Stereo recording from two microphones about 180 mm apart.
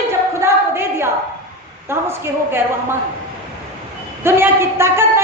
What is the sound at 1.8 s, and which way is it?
Speech, 15° right (ahead or behind).